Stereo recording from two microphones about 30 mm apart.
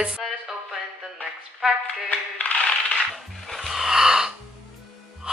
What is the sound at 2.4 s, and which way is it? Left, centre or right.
Coin, left.